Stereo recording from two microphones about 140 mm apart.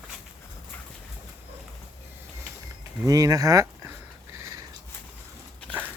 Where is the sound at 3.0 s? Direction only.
25° right (ahead or behind).